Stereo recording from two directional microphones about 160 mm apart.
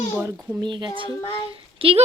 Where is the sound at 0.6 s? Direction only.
30° right (ahead or behind).